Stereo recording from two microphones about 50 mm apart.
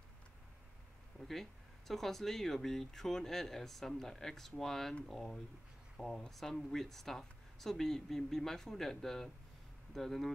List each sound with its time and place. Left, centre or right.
1.2 s speech: centre